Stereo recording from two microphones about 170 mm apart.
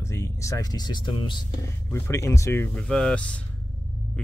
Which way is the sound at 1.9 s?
15° left (ahead or behind).